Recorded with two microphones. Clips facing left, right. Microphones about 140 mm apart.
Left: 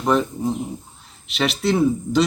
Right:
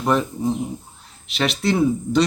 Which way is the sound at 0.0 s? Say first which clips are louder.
Left 1 dB; centre (ahead or behind).